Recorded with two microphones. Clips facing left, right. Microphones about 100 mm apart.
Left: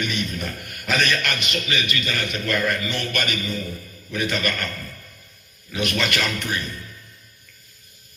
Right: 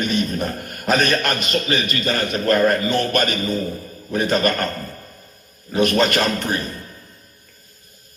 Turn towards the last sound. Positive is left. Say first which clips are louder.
# right 5 dB
turn(degrees=-40)  # may be behind; listen again after turning